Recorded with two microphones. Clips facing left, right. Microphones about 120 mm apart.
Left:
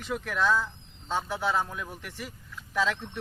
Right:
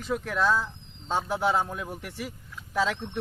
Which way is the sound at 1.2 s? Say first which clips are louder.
Right 5 dB; 55° right (ahead or behind).